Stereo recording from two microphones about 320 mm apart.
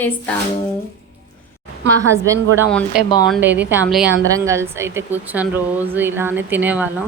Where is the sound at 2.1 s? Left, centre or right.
Centre.